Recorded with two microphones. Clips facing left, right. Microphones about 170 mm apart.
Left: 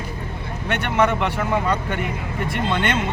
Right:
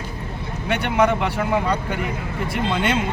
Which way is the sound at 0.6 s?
5° right (ahead or behind).